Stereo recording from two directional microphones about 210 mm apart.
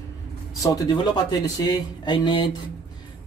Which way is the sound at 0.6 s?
20° left (ahead or behind).